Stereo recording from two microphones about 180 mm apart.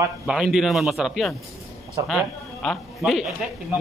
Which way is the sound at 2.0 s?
20° right (ahead or behind).